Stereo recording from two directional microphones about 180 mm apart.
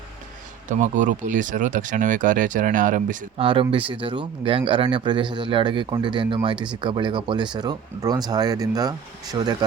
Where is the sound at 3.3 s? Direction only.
30° right (ahead or behind).